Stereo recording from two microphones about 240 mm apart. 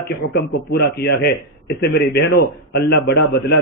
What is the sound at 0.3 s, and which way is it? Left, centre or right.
A man's voice, left.